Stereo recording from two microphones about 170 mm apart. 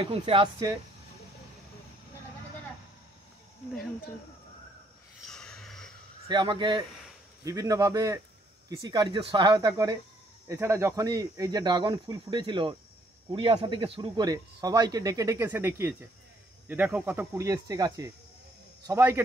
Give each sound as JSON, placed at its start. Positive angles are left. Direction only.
{"t": 0.0, "sound": "speech", "side_deg": -30}
{"t": 5.2, "sound": "a sound", "side_deg": 5}
{"t": 6.2, "sound": "speech", "side_deg": -25}